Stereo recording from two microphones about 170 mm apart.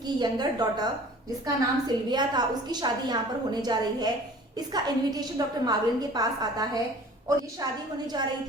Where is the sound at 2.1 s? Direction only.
25° right (ahead or behind).